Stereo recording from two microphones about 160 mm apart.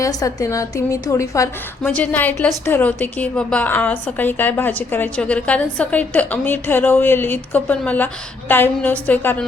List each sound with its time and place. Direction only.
0.0 s a woman's voice: 20° left (ahead or behind)